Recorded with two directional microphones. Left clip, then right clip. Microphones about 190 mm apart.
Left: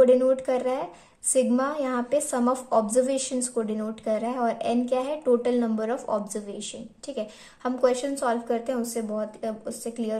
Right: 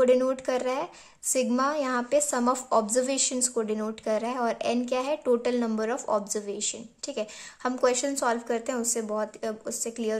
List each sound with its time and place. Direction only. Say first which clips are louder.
0.0 s a woman's voice: left 4 dB; 20° right (ahead or behind)